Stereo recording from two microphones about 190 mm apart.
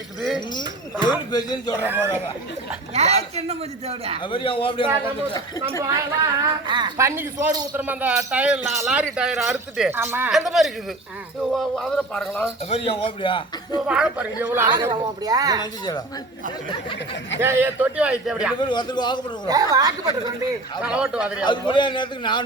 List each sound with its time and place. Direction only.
1.3 s a man's voice: 20° left (ahead or behind)
1.8 s speech: 10° right (ahead or behind)
2.9 s a woman's voice: 35° right (ahead or behind)
4.2 s a man's voice: 25° left (ahead or behind)
5.8 s a woman's voice: 20° right (ahead or behind); by 12.5 s 5° left (ahead or behind)
12.7 s a man's voice: 30° left (ahead or behind)
13.8 s a woman's voice: 5° right (ahead or behind); by 15.6 s 20° right (ahead or behind)
17.4 s speech: 10° right (ahead or behind)
18.6 s a man's voice: 25° left (ahead or behind)
19.5 s a woman's voice: 20° right (ahead or behind)
20.8 s speech: 5° right (ahead or behind)
21.4 s a man's voice: 25° left (ahead or behind)